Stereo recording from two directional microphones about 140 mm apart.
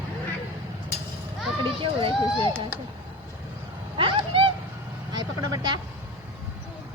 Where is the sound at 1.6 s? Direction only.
40° right (ahead or behind).